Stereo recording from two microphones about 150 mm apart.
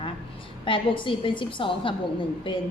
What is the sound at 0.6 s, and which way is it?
A woman's voice, 35° left (ahead or behind).